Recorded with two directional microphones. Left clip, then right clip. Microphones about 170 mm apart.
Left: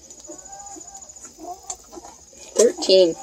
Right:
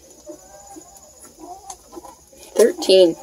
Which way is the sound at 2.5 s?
Centre (ahead or behind).